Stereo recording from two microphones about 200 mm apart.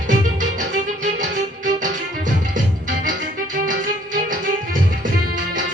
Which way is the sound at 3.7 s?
40° right (ahead or behind).